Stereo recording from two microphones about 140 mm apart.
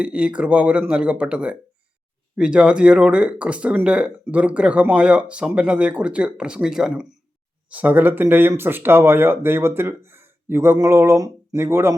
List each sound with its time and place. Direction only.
0.0 s speech: 10° right (ahead or behind)